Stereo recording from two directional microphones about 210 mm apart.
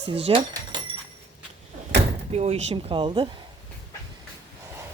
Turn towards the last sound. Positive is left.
turn(degrees=-25)  # may be behind; listen again after turning